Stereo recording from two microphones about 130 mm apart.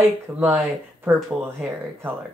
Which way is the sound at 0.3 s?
15° right (ahead or behind).